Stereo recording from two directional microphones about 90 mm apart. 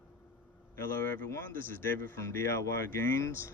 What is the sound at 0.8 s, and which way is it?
Speech, 25° left (ahead or behind).